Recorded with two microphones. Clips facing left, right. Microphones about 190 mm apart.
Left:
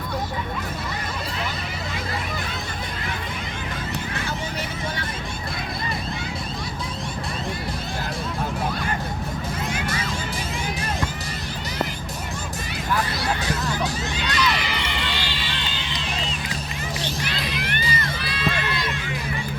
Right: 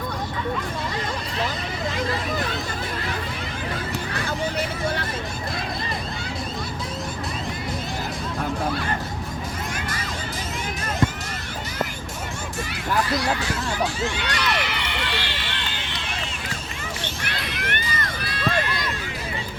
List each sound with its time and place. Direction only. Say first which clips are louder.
13.4 s a sound: even; 40° left (ahead or behind)
14.2 s crowd: left 1 dB; 60° right (ahead or behind)
17.2 s music: left 2 dB; 60° right (ahead or behind)